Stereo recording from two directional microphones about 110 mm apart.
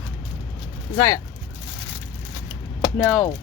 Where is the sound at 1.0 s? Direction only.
30° left (ahead or behind).